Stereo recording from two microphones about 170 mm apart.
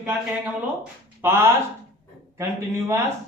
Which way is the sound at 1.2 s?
15° right (ahead or behind).